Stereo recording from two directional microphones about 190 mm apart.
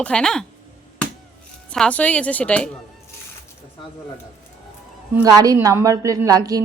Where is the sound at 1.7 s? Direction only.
5° left (ahead or behind).